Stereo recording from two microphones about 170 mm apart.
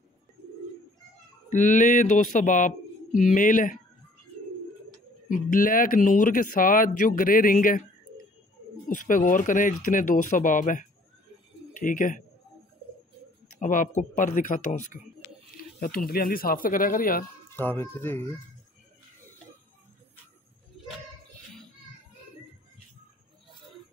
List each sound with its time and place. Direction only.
1.5 s speech: 50° left (ahead or behind)
5.3 s speech: 55° left (ahead or behind)
8.8 s speech: 50° left (ahead or behind)
13.6 s speech: 50° left (ahead or behind)
17.5 s speech: 10° left (ahead or behind)